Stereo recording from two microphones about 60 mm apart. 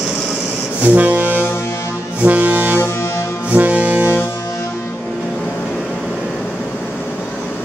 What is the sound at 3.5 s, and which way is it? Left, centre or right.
Brass instrument, right.